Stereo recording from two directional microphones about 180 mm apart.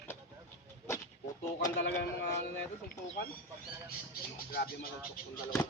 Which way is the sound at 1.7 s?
80° left.